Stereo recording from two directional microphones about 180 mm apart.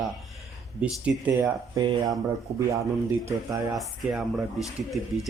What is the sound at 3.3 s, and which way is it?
Speech, 20° right (ahead or behind).